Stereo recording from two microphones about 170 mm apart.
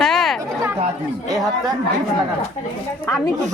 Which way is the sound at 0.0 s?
Centre (ahead or behind).